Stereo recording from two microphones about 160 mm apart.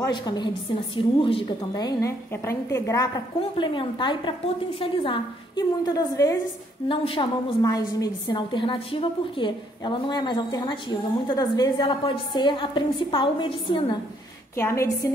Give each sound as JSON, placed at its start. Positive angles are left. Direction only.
{"t": 0.1, "sound": "a woman's voice", "side_deg": 30}
{"t": 3.3, "sound": "a woman's voice", "side_deg": 30}
{"t": 14.5, "sound": "a woman's voice", "side_deg": 15}